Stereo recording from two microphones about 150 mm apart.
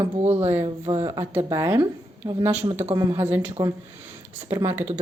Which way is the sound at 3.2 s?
10° right (ahead or behind).